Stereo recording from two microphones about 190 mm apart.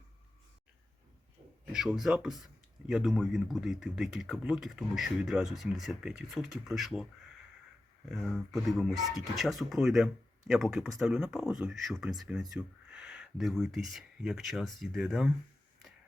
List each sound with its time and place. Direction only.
1.7 s speech: centre (ahead or behind)
8.1 s speech: centre (ahead or behind)